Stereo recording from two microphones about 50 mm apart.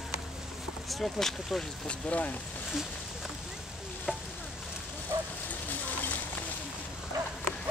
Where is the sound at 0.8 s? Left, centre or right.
Centre.